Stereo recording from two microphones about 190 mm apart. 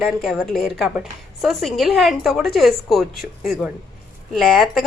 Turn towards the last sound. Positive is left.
turn(degrees=0)  # may be behind; listen again after turning